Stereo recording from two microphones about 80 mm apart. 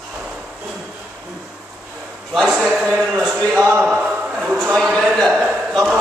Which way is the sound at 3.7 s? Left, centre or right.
Centre.